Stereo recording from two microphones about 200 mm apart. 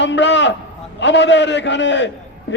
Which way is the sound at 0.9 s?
60° left (ahead or behind).